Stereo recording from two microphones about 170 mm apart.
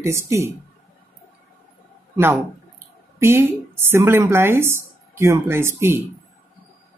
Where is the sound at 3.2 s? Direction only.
15° right (ahead or behind).